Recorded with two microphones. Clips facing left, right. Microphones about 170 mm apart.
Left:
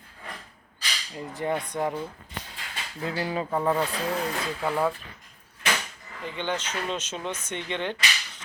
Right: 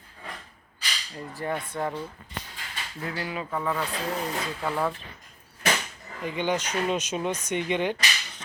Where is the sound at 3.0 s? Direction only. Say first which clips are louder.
Left 4 dB; 30° left (ahead or behind).